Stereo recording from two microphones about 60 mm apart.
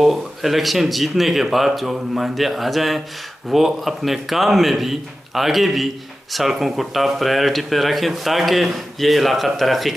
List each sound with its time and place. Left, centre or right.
0.0 s speech: centre